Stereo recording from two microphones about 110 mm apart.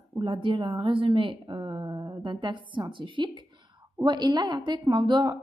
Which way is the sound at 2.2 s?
45° right (ahead or behind).